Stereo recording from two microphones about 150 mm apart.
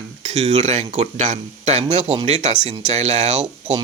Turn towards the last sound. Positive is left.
turn(degrees=-50)  # may be behind; listen again after turning